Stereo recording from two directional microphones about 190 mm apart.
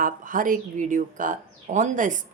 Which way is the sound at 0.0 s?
45° right (ahead or behind).